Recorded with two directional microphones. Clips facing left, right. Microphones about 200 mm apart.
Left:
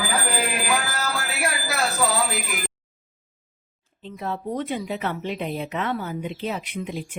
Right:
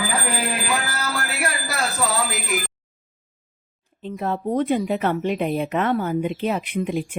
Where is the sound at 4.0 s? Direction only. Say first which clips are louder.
Right 5 dB; 50° right (ahead or behind).